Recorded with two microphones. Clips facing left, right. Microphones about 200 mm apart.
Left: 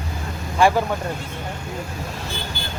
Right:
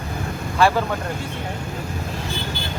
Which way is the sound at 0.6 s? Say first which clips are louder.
Left 1 dB; 15° left (ahead or behind).